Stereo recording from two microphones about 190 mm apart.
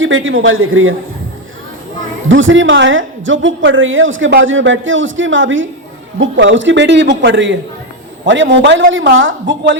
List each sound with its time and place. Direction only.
0.0 s a man's voice: 90° right
2.3 s a woman's voice: 85° right
6.1 s a man's voice: 75° right (ahead or behind)
8.9 s a woman's voice: 80° right